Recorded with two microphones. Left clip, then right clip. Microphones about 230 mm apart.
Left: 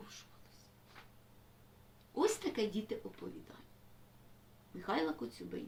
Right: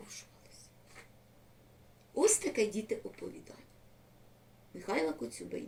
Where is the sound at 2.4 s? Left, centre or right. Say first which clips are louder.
Right 5 dB; centre.